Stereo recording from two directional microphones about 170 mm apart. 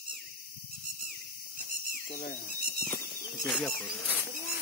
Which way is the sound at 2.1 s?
50° left (ahead or behind).